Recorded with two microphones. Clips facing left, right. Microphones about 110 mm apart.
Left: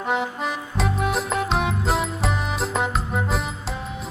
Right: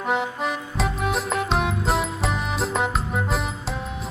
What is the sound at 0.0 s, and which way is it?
Music, centre (ahead or behind).